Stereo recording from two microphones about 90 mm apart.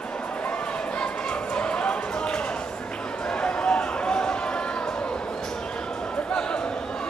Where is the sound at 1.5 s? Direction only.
10° left (ahead or behind).